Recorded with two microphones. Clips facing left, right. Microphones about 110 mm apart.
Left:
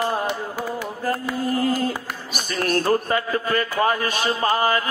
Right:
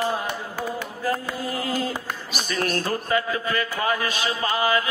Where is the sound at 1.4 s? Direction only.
45° left (ahead or behind).